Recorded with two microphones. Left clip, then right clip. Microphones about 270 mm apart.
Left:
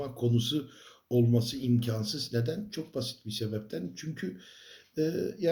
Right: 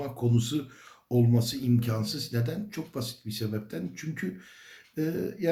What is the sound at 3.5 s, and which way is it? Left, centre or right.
Speech, centre.